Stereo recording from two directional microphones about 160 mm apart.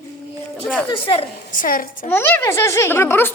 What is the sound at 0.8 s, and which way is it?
Speech, 35° left (ahead or behind).